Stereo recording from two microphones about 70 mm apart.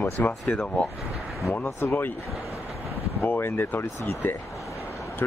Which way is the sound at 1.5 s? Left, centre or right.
Left.